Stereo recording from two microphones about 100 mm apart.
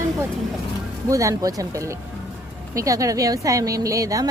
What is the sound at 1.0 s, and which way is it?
A woman's voice, 35° right (ahead or behind).